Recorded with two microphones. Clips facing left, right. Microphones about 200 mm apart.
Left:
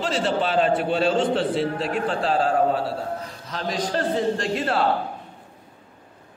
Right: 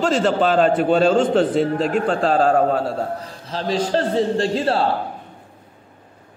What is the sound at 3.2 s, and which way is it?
A man's voice, 30° right (ahead or behind).